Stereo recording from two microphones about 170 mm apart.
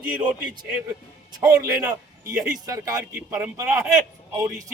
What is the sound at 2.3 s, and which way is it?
Speech, 50° right (ahead or behind).